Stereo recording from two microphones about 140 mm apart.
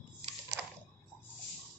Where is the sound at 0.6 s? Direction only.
5° right (ahead or behind).